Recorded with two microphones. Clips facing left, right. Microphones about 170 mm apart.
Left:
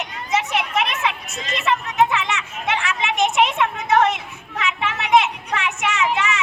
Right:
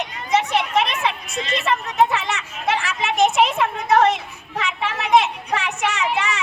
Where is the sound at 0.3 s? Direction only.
35° right (ahead or behind).